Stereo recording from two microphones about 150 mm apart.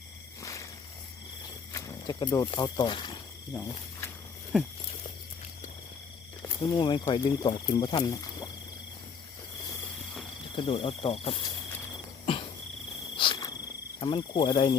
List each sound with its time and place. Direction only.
0.4 s a sound: 20° left (ahead or behind)
1.7 s snake: 25° left (ahead or behind)
2.5 s speech: 30° left (ahead or behind)
6.6 s speech: 30° left (ahead or behind)
10.5 s speech: 35° left (ahead or behind)
12.2 s cricket: 35° left (ahead or behind)
14.0 s speech: 30° left (ahead or behind)